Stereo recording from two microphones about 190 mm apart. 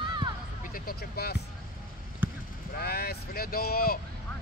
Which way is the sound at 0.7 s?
55° left (ahead or behind).